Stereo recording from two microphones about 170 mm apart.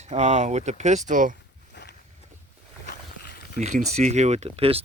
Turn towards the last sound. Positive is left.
turn(degrees=-35)  # may be behind; listen again after turning